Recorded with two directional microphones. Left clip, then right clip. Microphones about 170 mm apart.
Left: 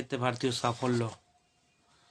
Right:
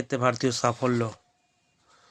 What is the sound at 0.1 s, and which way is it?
Speech, 40° right (ahead or behind).